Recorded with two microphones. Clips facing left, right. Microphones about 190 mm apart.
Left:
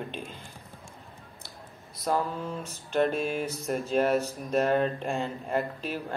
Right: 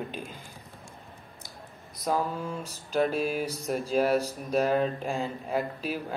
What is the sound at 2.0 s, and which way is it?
Speech, 5° right (ahead or behind).